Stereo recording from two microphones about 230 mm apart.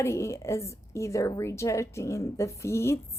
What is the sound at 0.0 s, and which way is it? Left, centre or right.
Speech, centre.